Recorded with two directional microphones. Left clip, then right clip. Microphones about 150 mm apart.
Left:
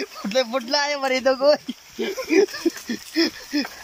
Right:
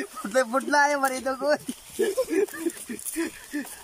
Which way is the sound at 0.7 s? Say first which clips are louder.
Even; 10° left (ahead or behind).